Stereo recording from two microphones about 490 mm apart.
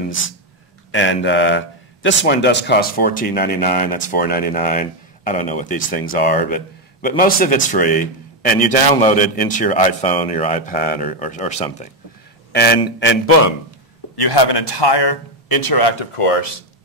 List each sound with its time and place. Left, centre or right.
0.9 s a man's voice: left
14.1 s a man's voice: left
16.0 s speech: left